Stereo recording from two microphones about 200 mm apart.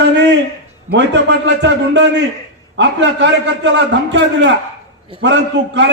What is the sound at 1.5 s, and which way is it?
A man's voice, 60° right (ahead or behind).